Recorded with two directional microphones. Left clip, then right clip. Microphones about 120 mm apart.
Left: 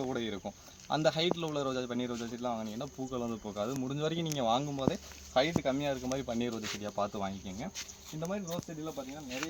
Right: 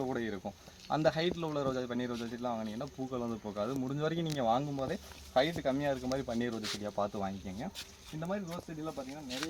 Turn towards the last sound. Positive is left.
turn(degrees=-5)  # may be behind; listen again after turning